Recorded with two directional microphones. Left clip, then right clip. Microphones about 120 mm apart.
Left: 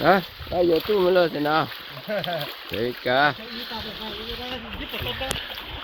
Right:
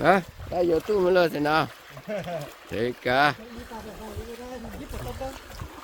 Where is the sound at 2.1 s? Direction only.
90° right.